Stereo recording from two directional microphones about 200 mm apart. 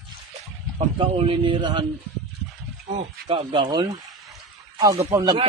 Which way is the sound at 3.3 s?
25° right (ahead or behind).